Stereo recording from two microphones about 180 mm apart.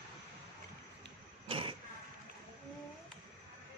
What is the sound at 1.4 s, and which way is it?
Vehicle, 30° right (ahead or behind).